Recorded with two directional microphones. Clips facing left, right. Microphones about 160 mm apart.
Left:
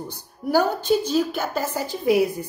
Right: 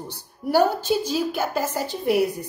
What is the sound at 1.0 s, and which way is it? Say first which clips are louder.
Speech: left 2 dB; 10° right (ahead or behind).